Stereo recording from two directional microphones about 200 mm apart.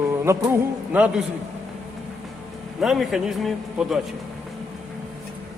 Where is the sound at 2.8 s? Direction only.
Centre (ahead or behind).